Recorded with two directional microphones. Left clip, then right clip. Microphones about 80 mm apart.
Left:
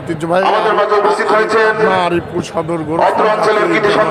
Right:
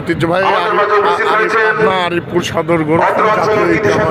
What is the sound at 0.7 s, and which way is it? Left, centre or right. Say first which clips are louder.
Speech: even; left.